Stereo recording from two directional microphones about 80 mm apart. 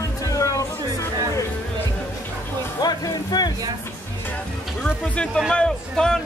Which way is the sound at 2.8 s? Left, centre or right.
Left.